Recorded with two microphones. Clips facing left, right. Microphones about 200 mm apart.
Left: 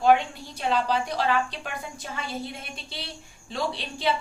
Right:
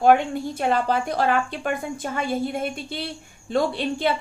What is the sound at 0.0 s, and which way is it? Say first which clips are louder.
A woman's voice: right 3 dB; 50° right (ahead or behind).